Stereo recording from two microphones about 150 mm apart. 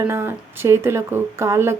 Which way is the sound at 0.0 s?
15° right (ahead or behind).